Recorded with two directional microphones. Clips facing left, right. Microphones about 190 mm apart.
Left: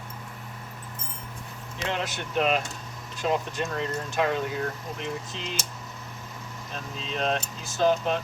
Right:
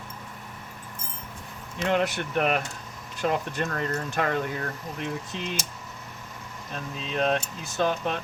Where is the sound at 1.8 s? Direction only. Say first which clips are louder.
Right 6 dB; 55° right (ahead or behind).